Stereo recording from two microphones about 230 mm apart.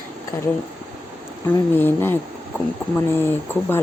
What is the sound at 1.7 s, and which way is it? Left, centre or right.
Speech, centre.